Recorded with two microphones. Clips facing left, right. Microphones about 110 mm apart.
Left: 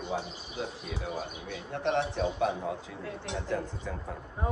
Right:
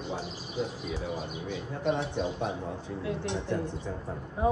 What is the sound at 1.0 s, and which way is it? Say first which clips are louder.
Speech: left 2 dB; 70° left (ahead or behind).